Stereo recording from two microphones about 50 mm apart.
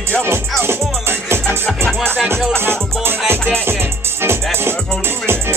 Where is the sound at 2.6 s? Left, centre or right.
Right.